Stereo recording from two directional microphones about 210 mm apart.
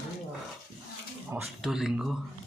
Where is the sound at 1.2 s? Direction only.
5° right (ahead or behind).